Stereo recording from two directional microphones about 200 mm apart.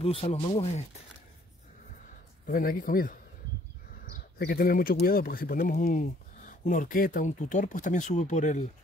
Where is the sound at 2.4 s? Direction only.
45° left (ahead or behind).